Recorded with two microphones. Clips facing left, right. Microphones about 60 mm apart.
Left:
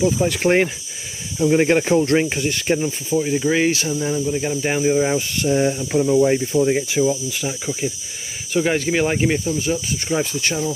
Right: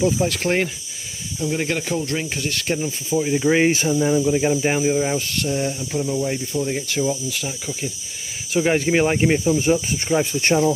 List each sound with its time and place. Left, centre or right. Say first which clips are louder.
0.0 s speech: left 1 dB; centre
0.4 s speech: left 4 dB; centre
3.1 s speech: right 1 dB; centre
4.6 s speech: left 1 dB; centre
4.9 s speech: left 3 dB; centre
5.5 s speech: left 7 dB; left
6.9 s speech: left 3 dB; centre
8.5 s speech: right 1 dB; centre
9.4 s speech: right 4 dB; right
10.0 s speech: right 1 dB; centre